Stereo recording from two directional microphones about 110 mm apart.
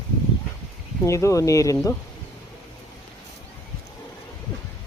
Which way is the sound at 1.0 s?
30° left (ahead or behind).